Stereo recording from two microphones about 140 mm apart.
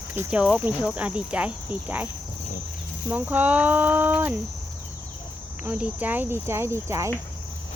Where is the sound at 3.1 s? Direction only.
10° right (ahead or behind).